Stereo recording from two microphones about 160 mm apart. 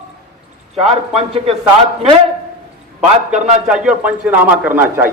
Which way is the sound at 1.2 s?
40° right (ahead or behind).